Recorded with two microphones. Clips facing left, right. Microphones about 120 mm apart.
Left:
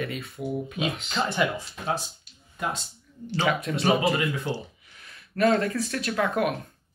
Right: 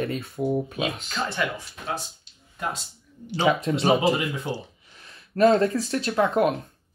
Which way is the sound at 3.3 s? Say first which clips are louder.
Right 4 dB; 25° right (ahead or behind).